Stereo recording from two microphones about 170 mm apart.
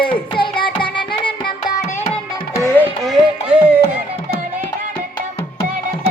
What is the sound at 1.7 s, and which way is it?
Music, 40° left (ahead or behind).